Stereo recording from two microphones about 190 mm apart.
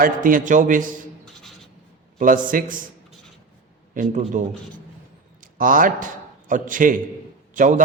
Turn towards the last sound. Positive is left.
turn(degrees=-40)  # may be behind; listen again after turning